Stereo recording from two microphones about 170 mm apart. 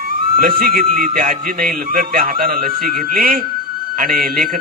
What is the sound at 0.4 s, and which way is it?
A man's voice, 60° right (ahead or behind).